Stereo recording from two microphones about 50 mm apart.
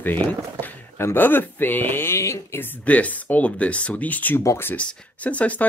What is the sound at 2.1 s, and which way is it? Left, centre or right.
Speech, left.